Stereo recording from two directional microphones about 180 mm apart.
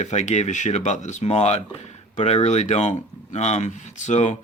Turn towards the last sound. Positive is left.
turn(degrees=40)  # may be behind; listen again after turning